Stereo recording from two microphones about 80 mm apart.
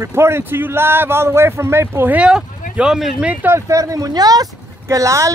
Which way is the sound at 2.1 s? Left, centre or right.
Centre.